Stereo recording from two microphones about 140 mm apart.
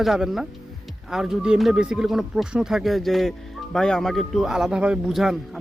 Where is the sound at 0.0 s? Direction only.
Centre (ahead or behind).